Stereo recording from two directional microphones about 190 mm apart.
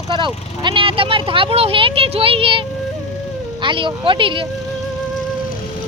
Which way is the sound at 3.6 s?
25° right (ahead or behind).